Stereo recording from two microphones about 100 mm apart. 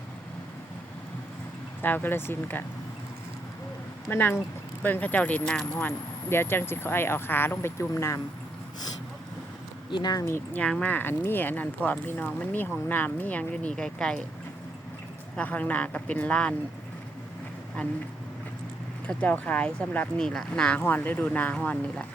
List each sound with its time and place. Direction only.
1.8 s speech: 20° left (ahead or behind)
4.1 s speech: 20° left (ahead or behind)
9.9 s speech: 45° left (ahead or behind)
10.2 s speech: 25° left (ahead or behind)
10.6 s speech: 10° left (ahead or behind)
10.9 s speech: 20° left (ahead or behind)
15.4 s speech: 15° left (ahead or behind)
19.0 s speech: 15° left (ahead or behind)